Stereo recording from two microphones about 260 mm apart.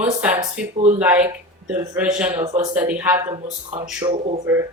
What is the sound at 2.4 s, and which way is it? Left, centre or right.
Speech, right.